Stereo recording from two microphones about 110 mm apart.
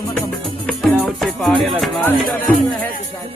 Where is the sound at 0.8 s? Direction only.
Centre (ahead or behind).